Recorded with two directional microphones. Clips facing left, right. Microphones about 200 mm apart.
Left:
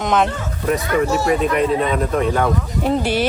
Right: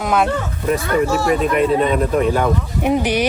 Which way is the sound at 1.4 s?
Centre (ahead or behind).